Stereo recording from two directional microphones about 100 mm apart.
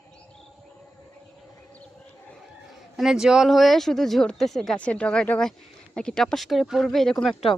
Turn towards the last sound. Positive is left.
turn(degrees=5)  # may be behind; listen again after turning